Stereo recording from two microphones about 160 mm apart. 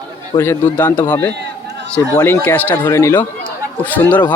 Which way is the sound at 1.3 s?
90° right.